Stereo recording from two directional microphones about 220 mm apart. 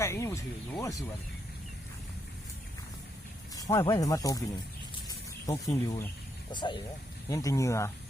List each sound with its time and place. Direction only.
0.0 s speech: 15° left (ahead or behind)
3.5 s speech: 15° left (ahead or behind)
5.0 s a sound: 15° left (ahead or behind)
6.5 s speech: 20° left (ahead or behind)